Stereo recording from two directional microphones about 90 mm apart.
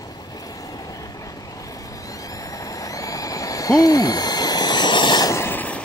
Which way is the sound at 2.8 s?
40° left (ahead or behind).